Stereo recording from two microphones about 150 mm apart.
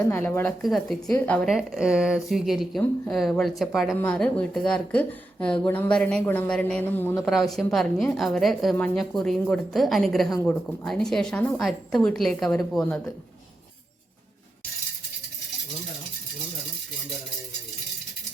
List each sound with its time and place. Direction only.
0.1 s speech: 15° left (ahead or behind)
0.4 s a woman's voice: centre (ahead or behind)
1.5 s a woman's voice: 5° right (ahead or behind); by 7.3 s 15° left (ahead or behind)
7.3 s a woman's voice: centre (ahead or behind)